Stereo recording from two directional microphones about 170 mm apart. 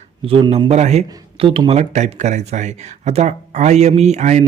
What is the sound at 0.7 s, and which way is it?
Speech, 40° right (ahead or behind).